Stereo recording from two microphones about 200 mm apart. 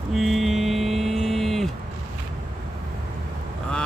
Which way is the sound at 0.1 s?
Centre (ahead or behind).